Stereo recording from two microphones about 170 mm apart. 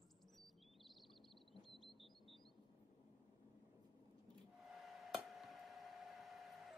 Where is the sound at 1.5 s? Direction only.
Centre (ahead or behind).